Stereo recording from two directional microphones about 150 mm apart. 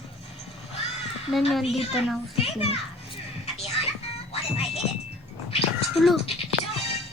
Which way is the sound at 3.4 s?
45° left (ahead or behind).